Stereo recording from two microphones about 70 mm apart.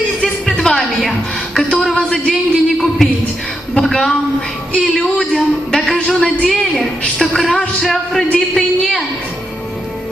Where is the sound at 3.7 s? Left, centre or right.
Centre.